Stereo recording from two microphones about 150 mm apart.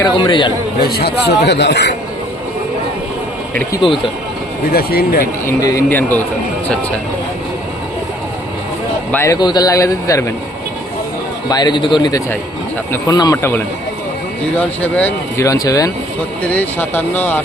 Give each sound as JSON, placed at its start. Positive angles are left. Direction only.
{"t": 0.0, "sound": "a man's voice", "side_deg": 30}
{"t": 0.8, "sound": "a man's voice", "side_deg": 90}
{"t": 3.8, "sound": "a man's voice", "side_deg": 30}
{"t": 4.7, "sound": "a man's voice", "side_deg": 90}
{"t": 5.5, "sound": "speech", "side_deg": 20}
{"t": 9.1, "sound": "speech", "side_deg": 20}
{"t": 11.4, "sound": "speech", "side_deg": 30}
{"t": 14.6, "sound": "speech", "side_deg": 10}
{"t": 15.4, "sound": "speech", "side_deg": 20}
{"t": 16.4, "sound": "speech", "side_deg": 10}